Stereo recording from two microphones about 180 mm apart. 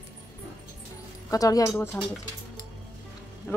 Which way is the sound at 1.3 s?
20° left (ahead or behind).